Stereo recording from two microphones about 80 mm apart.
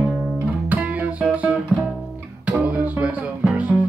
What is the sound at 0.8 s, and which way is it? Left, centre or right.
Music, centre.